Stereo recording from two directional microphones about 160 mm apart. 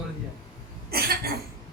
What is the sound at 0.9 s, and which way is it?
Cough, 75° right (ahead or behind).